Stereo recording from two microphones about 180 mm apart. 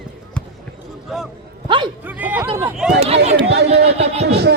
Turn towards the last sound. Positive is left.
turn(degrees=-65)  # may be behind; listen again after turning